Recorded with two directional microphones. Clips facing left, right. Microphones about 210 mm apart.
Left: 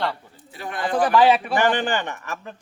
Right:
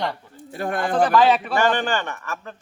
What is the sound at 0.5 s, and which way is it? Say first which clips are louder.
Speech: right 2 dB; 50° right (ahead or behind).